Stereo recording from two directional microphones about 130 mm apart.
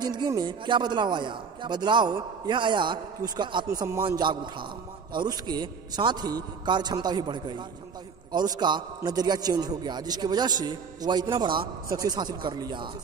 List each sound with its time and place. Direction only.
0.0 s a man's voice: 35° right (ahead or behind)
3.6 s a man's voice: 25° right (ahead or behind)